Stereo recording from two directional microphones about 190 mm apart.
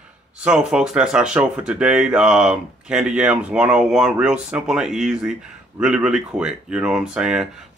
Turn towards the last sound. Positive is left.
turn(degrees=-5)  # may be behind; listen again after turning